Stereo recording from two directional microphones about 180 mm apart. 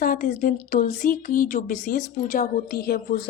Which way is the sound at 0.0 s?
50° left (ahead or behind).